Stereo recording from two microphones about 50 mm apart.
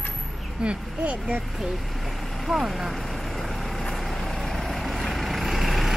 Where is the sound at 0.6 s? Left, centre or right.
Right.